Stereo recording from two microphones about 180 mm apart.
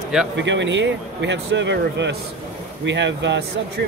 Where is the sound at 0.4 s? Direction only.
85° right.